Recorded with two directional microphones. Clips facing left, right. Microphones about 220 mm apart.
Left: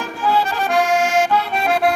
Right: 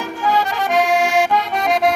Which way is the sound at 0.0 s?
15° right (ahead or behind).